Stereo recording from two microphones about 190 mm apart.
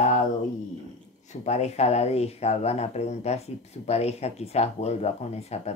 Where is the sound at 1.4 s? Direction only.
35° left (ahead or behind).